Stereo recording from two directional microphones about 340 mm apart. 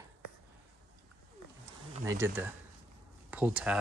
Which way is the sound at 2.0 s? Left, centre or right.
Centre.